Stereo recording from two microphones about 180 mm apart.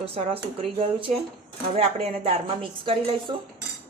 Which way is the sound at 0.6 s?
30° right (ahead or behind).